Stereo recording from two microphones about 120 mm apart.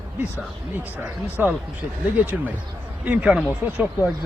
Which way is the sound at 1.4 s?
15° right (ahead or behind).